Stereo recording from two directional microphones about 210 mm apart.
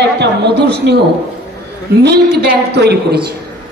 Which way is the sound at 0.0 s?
55° right (ahead or behind).